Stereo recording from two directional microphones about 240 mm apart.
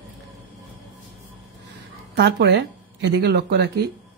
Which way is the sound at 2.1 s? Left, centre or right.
Right.